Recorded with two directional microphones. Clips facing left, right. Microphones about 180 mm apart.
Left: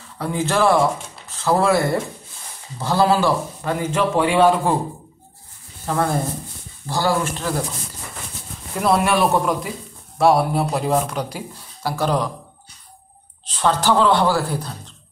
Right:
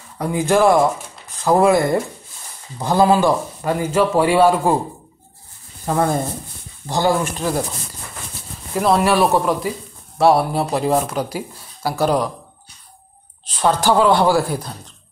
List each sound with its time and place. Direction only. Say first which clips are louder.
0.2 s a man's voice: right 4 dB; 15° right (ahead or behind)
5.9 s a man's voice: right 2 dB; 20° right (ahead or behind)
8.7 s speech: right 2 dB; centre (ahead or behind)
13.6 s a man's voice: right 2 dB; 10° right (ahead or behind)